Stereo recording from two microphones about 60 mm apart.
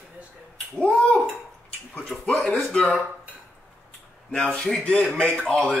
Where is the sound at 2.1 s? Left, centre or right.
Centre.